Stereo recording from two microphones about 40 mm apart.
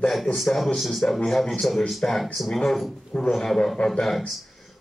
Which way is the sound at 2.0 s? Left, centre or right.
Left.